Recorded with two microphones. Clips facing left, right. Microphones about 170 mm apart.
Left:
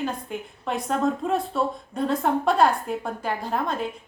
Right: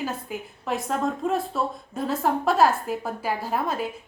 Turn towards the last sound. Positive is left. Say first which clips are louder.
# even
turn(degrees=-5)  # may be behind; listen again after turning